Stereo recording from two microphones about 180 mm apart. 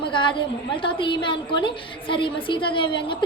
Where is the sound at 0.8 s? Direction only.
30° left (ahead or behind).